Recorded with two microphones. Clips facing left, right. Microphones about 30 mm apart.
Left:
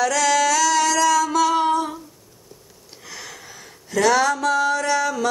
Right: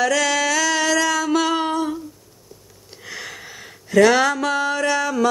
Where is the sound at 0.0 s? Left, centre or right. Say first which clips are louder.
Even; centre.